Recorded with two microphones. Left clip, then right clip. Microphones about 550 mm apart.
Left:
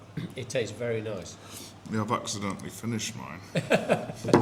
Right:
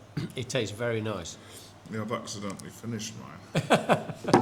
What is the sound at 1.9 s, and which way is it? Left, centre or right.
Speech, left.